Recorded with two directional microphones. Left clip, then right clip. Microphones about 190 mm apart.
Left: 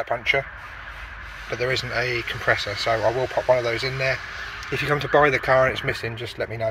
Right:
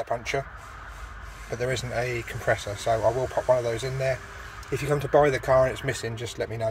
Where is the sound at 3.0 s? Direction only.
10° left (ahead or behind).